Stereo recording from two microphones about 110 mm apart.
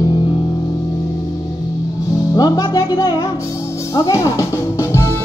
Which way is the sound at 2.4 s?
35° left (ahead or behind).